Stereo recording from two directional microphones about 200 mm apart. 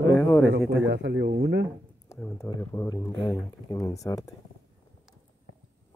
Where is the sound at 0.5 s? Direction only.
65° right (ahead or behind).